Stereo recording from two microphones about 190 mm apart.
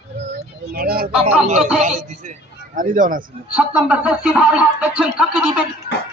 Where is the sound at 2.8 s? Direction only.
45° right (ahead or behind).